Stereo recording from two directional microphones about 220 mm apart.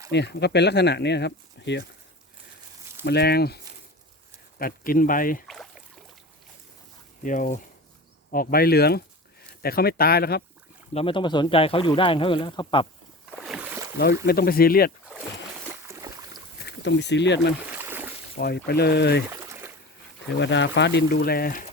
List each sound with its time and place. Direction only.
0.1 s speech: 50° left (ahead or behind)
3.0 s speech: 50° left (ahead or behind)
4.6 s speech: 40° left (ahead or behind)
7.3 s speech: 35° left (ahead or behind)
10.9 s speech: 25° left (ahead or behind)
13.4 s boat: 5° right (ahead or behind)
14.3 s speech: 45° left (ahead or behind)
15.9 s boat: 15° right (ahead or behind)
16.6 s speech: 50° left (ahead or behind)
17.8 s boat: 10° right (ahead or behind)
18.3 s speech: 45° left (ahead or behind)
19.3 s a sound: 15° right (ahead or behind)
20.4 s speech: 55° left (ahead or behind)